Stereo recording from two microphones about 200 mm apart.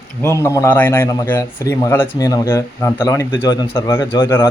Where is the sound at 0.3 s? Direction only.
15° left (ahead or behind).